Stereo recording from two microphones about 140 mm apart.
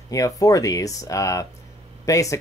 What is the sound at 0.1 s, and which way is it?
Speech, 25° left (ahead or behind).